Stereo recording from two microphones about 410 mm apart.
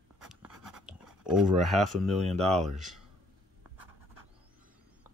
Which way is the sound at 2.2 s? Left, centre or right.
Centre.